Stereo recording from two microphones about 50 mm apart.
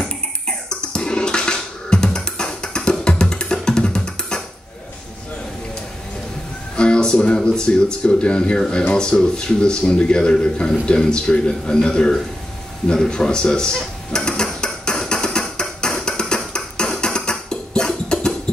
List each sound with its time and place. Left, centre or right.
0.0 s music: centre
6.8 s speech: centre
13.0 s dishes: centre